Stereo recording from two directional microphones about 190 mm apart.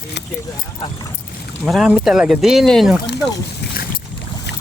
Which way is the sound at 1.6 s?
5° right (ahead or behind).